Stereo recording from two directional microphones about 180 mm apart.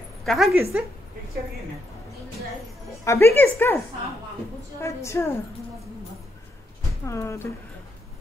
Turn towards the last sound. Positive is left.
turn(degrees=15)  # may be behind; listen again after turning